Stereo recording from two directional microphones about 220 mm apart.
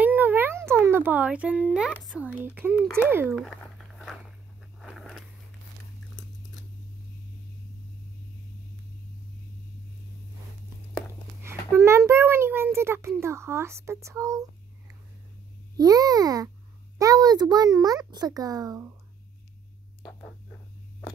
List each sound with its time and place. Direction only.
0.0 s a child's voice: 10° right (ahead or behind)
3.4 s walk: centre (ahead or behind)
4.7 s a sound: centre (ahead or behind)
11.4 s a child's voice: 10° right (ahead or behind)
15.8 s a child's voice: 15° right (ahead or behind)
20.0 s a sound: 15° left (ahead or behind)